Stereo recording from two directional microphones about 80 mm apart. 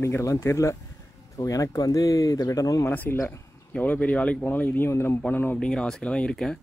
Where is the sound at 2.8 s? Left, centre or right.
Left.